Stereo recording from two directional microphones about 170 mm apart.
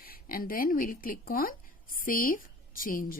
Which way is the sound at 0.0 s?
60° left (ahead or behind).